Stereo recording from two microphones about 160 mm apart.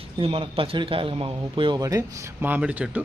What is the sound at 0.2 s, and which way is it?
A man's voice, 35° right (ahead or behind).